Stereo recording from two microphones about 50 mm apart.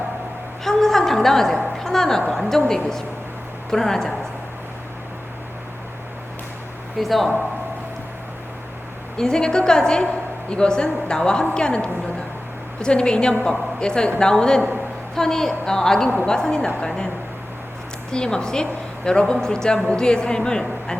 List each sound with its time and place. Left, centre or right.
0.6 s a woman's voice: centre
7.0 s speech: centre
9.1 s a woman's voice: centre
18.1 s a woman's voice: centre